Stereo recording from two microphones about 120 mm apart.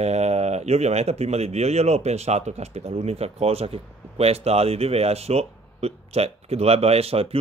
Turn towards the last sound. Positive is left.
turn(degrees=-55)  # may be behind; listen again after turning